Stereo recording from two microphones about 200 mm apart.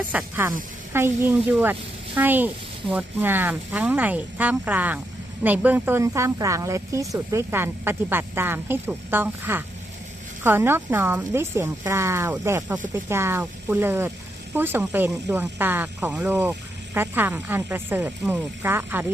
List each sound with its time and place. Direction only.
0.1 s speech: 10° right (ahead or behind)